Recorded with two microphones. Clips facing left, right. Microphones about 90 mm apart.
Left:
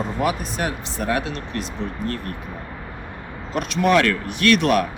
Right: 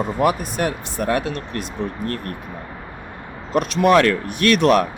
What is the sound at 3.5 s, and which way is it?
Speech, 45° right (ahead or behind).